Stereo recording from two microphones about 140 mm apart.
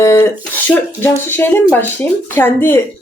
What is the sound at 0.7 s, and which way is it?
A woman's voice, 15° left (ahead or behind).